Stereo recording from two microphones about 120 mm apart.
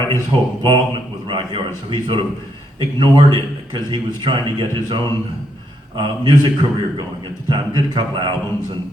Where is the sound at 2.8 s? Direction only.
40° right (ahead or behind).